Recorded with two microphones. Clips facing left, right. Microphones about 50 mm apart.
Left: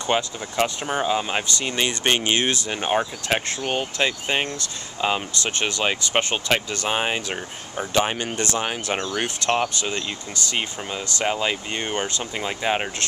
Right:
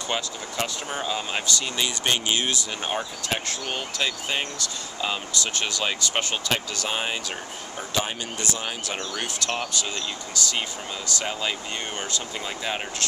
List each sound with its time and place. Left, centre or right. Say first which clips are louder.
0.0 s speech: left 6 dB; left
2.7 s speech: left 6 dB; left
7.9 s speech: left 6 dB; left
8.6 s speech: left 5 dB; left
11.1 s speech: left 6 dB; left